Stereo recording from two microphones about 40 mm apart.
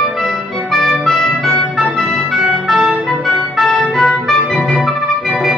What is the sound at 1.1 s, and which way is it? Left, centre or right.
Music, centre.